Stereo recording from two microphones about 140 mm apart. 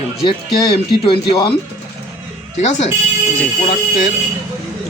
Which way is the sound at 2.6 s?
55° left (ahead or behind).